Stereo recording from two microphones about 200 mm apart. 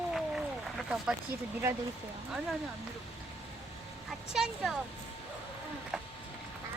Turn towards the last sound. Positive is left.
turn(degrees=0)  # may be behind; listen again after turning